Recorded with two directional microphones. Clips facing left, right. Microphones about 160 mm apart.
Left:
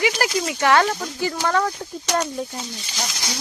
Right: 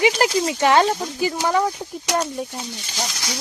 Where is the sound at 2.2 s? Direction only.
5° right (ahead or behind).